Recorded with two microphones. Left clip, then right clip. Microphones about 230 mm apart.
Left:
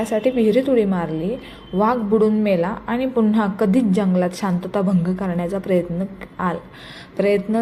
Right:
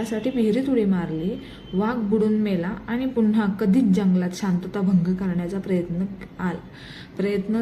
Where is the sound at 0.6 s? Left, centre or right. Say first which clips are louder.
Left 5 dB; centre.